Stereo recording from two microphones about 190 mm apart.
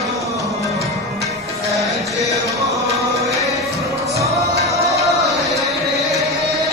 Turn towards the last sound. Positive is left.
turn(degrees=0)  # may be behind; listen again after turning